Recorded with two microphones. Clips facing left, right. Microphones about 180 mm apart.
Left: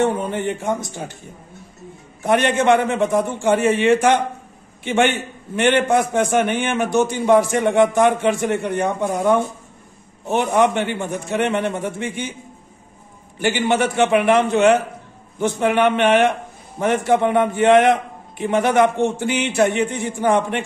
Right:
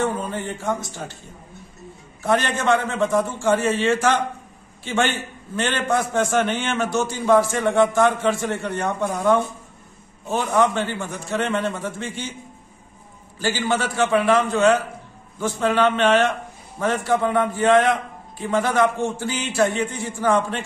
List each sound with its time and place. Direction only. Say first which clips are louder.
0.6 s a man's voice: left 2 dB; 20° left (ahead or behind)
2.2 s a man's voice: left 4 dB; 20° left (ahead or behind)
10.5 s a man's voice: left 1 dB; 20° left (ahead or behind)
13.4 s a man's voice: left 4 dB; 20° left (ahead or behind)